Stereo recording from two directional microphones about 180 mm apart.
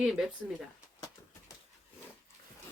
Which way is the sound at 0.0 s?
5° right (ahead or behind).